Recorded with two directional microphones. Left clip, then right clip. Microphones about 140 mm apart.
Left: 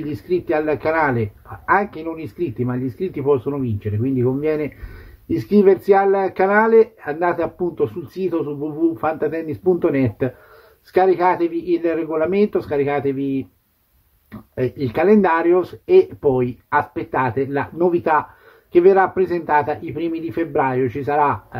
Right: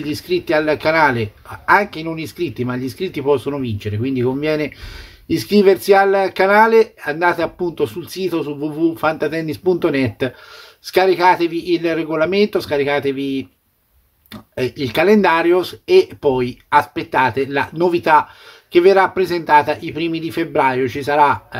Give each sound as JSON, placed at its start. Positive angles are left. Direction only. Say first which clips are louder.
{"t": 0.0, "sound": "speech", "louder": "right 2 dB", "side_deg": -15}